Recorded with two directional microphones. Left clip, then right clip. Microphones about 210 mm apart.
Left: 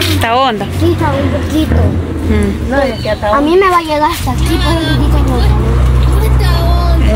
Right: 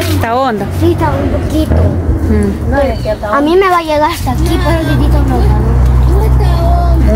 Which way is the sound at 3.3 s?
Centre (ahead or behind).